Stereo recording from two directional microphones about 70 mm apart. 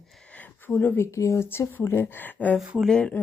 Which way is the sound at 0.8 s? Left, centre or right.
Left.